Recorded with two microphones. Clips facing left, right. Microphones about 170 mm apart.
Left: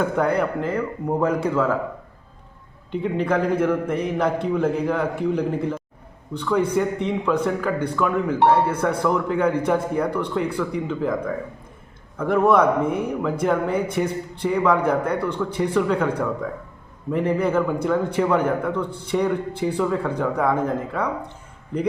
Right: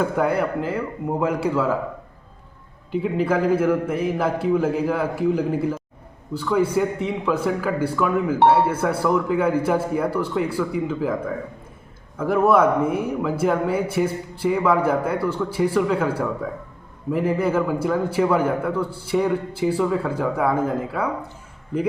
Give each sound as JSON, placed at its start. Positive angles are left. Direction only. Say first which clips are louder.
{"t": 0.2, "sound": "a man's voice", "louder": "even", "side_deg": -5}
{"t": 2.9, "sound": "a man's voice", "louder": "right 1 dB", "side_deg": -5}
{"t": 12.1, "sound": "a man's voice", "louder": "even", "side_deg": -5}